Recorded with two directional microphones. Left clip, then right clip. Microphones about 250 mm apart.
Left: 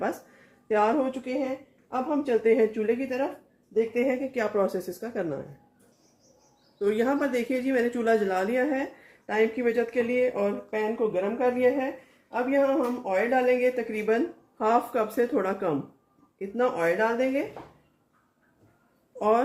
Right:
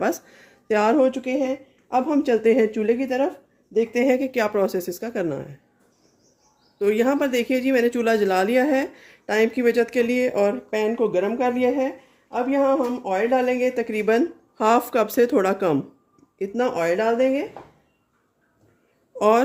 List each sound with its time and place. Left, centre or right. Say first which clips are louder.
0.7 s speech: right 6 dB; right
6.7 s speech: right 5 dB; right
12.3 s speech: right 4 dB; right